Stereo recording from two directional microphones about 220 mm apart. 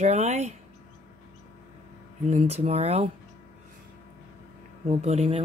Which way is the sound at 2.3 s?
30° right (ahead or behind).